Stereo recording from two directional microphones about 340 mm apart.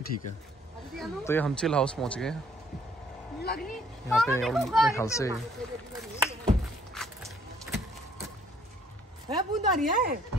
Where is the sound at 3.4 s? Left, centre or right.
Left.